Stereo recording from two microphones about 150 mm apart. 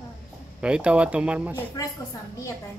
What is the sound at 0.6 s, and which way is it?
Speech, 5° right (ahead or behind).